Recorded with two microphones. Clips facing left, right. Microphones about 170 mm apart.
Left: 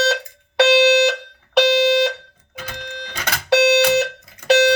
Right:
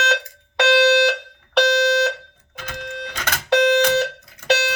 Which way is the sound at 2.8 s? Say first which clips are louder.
Right 5 dB; 55° right (ahead or behind).